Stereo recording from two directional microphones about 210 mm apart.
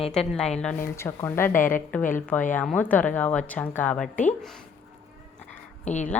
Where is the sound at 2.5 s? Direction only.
5° left (ahead or behind).